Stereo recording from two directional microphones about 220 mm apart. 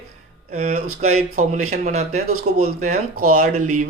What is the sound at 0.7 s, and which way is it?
Speech, 80° right.